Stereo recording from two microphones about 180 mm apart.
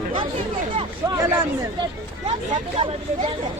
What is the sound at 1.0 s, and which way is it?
Speech, 15° right (ahead or behind).